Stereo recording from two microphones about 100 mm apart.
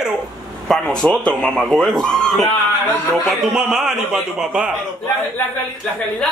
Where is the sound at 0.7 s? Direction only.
10° left (ahead or behind).